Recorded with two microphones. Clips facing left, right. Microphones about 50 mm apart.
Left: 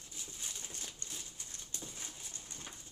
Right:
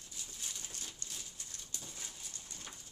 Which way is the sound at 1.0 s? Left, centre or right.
Left.